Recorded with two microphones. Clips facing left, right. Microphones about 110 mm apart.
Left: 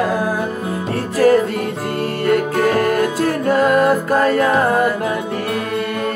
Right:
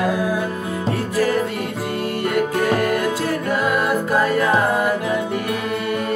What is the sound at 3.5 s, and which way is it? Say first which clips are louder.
Music: left 8 dB; 45° left (ahead or behind).